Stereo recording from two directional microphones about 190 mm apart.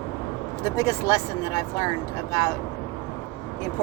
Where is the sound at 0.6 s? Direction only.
20° left (ahead or behind).